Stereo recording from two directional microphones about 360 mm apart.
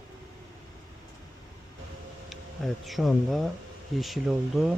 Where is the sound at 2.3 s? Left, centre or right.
Centre.